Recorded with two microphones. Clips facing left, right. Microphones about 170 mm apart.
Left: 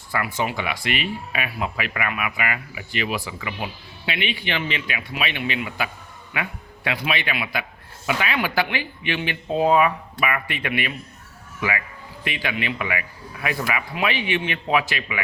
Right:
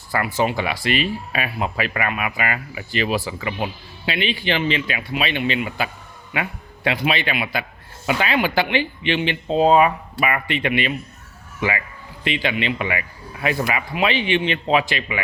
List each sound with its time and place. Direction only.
0.1 s speech: 35° right (ahead or behind)